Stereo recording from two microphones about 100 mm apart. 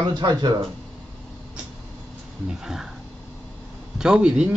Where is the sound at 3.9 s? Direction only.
10° right (ahead or behind).